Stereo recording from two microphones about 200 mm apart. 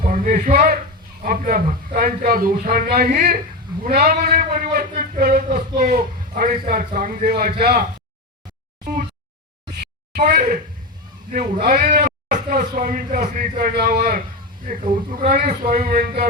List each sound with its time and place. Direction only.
0.0 s a man's voice: 40° right (ahead or behind)
10.2 s a man's voice: 45° right (ahead or behind)
11.6 s a man's voice: 45° right (ahead or behind)